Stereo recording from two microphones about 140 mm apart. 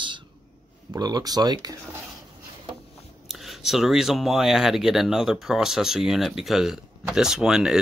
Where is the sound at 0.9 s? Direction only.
30° right (ahead or behind).